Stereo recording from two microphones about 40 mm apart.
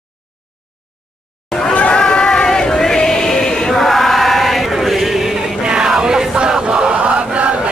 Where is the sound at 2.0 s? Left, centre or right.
Centre.